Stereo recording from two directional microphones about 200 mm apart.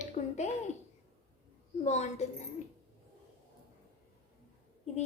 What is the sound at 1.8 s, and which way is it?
Speech, 35° left (ahead or behind).